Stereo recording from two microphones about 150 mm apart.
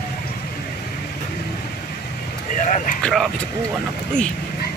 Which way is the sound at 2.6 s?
55° left (ahead or behind).